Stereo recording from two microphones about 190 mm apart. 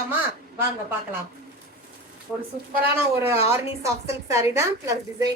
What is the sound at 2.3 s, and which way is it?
A woman's voice, 5° right (ahead or behind).